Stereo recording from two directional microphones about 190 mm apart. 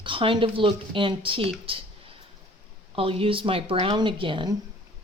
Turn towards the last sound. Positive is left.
turn(degrees=-25)  # may be behind; listen again after turning